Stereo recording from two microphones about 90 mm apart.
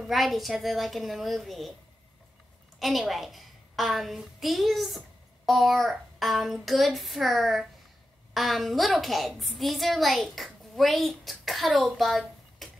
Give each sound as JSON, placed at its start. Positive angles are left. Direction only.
{"t": 0.0, "sound": "a woman's voice", "side_deg": 0}
{"t": 2.8, "sound": "a woman's voice", "side_deg": 0}